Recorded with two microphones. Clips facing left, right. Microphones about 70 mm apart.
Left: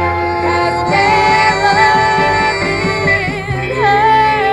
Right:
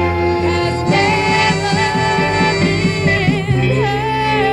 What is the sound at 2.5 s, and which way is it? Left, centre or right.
Music, left.